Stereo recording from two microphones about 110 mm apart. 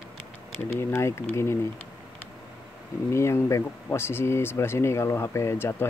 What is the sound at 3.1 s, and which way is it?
Speech, 25° left (ahead or behind).